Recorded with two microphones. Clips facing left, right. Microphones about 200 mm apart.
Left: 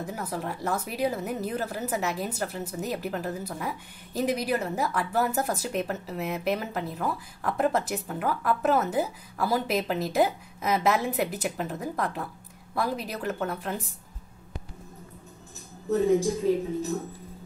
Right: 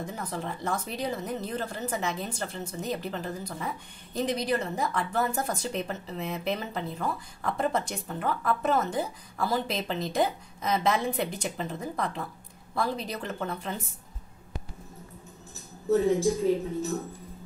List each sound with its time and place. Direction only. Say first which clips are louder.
0.0 s a woman's voice: left 2 dB; 5° left (ahead or behind)